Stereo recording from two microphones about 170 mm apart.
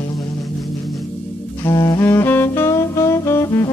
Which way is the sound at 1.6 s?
20° left (ahead or behind).